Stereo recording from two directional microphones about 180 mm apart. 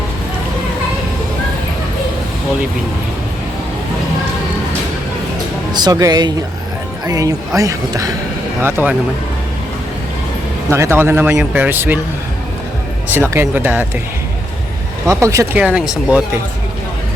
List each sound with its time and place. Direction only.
5.7 s speech: 20° right (ahead or behind)
10.7 s speech: 15° right (ahead or behind)
13.1 s speech: 15° right (ahead or behind)
15.0 s speech: 15° right (ahead or behind)
15.6 s speech: 5° right (ahead or behind)